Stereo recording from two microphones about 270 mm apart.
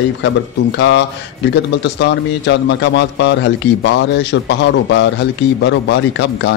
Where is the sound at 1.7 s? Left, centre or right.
Left.